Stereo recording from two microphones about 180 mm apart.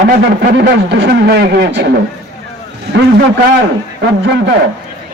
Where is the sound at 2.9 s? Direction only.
70° right (ahead or behind).